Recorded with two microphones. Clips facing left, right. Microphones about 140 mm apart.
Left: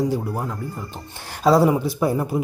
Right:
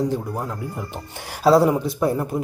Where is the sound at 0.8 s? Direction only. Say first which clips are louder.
Right 2 dB; 15° right (ahead or behind); by 2.4 s 5° left (ahead or behind).